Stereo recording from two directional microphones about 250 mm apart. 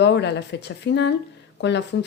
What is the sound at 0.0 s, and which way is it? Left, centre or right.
Speech, left.